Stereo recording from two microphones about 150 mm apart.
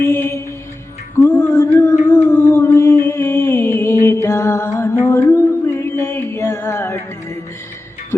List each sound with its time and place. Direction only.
0.0 s mantra: 20° left (ahead or behind)
1.2 s a sound: 20° left (ahead or behind)
2.1 s music: 15° left (ahead or behind)